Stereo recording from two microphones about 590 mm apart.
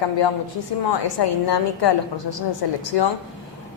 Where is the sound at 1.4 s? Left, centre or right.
Left.